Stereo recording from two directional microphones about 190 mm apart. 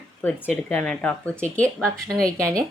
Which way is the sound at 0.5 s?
5° left (ahead or behind).